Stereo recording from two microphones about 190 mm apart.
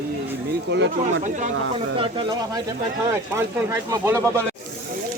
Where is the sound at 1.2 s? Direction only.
40° right (ahead or behind).